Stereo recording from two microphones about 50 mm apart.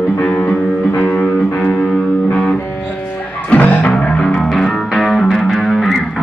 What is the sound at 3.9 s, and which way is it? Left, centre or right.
Music, centre.